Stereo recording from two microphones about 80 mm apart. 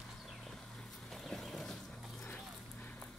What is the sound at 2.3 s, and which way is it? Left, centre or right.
Dog, left.